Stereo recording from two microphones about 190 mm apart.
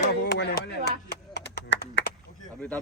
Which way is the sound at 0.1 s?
60° left (ahead or behind).